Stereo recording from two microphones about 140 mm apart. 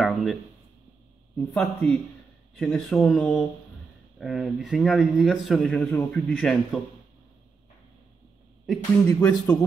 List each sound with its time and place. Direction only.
0.0 s a sound: centre (ahead or behind)
1.5 s a man's voice: 10° left (ahead or behind)
5.8 s a man's voice: 10° left (ahead or behind)
9.1 s speech: 20° left (ahead or behind)